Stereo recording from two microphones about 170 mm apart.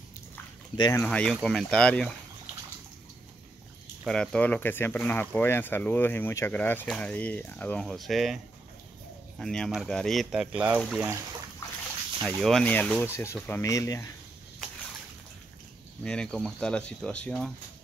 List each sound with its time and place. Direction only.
0.7 s speech: 25° left (ahead or behind)
1.0 s speech: 5° left (ahead or behind)
4.0 s speech: 5° left (ahead or behind)
9.4 s speech: 5° left (ahead or behind)
12.4 s speech: 5° left (ahead or behind); by 14.1 s 20° left (ahead or behind)
16.0 s speech: 5° left (ahead or behind)